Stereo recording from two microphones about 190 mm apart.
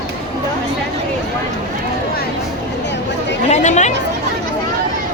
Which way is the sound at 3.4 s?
40° left (ahead or behind).